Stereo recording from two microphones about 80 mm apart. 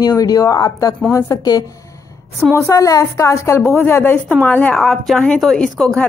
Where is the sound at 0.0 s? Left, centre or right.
Left.